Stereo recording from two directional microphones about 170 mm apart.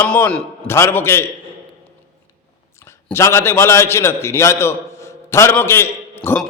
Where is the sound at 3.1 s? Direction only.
15° left (ahead or behind).